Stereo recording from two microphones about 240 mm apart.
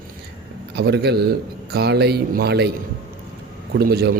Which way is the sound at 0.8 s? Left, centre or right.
Right.